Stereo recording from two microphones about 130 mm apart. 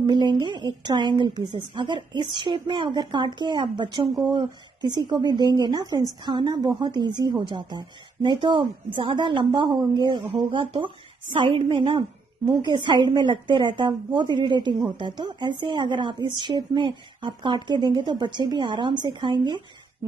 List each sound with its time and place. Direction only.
0.0 s a woman's voice: 35° right (ahead or behind)